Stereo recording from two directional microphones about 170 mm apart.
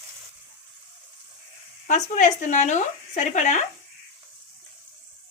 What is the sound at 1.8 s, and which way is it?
Speech, 50° left (ahead or behind).